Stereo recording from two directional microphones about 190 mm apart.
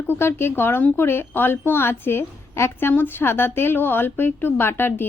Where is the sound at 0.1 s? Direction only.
15° left (ahead or behind).